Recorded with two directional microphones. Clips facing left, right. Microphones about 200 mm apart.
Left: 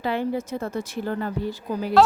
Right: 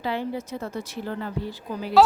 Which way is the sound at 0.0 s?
50° left (ahead or behind).